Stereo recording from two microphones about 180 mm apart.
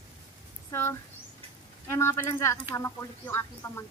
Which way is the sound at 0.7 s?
15° left (ahead or behind).